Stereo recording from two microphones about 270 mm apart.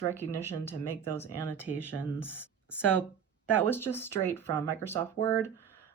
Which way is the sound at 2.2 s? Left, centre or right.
Centre.